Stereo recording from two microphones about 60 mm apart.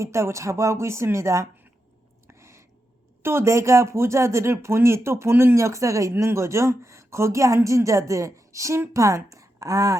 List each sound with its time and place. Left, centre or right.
0.0 s speech: right
2.2 s a sound: right
3.2 s speech: right
5.5 s speech: right